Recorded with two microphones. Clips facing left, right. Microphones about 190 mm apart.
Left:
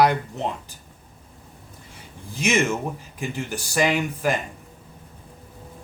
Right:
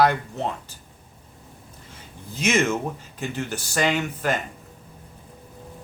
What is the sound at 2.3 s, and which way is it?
Speech, 10° left (ahead or behind).